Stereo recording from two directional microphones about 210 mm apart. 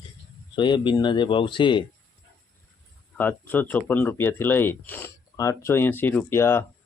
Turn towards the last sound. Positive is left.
turn(degrees=10)  # may be behind; listen again after turning